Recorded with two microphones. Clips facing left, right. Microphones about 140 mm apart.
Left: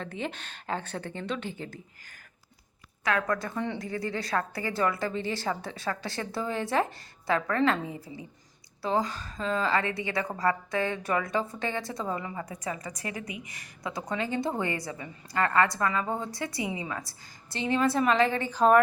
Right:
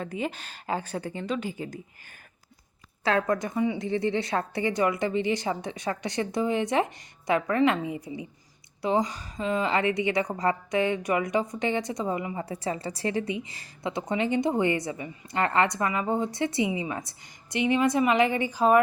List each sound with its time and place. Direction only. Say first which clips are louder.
0.0 s speech: right 3 dB; 5° right (ahead or behind)
3.0 s a woman's voice: right 3 dB; 30° right (ahead or behind)
12.5 s a woman's voice: right 5 dB; 30° right (ahead or behind); by 18.8 s 10° right (ahead or behind)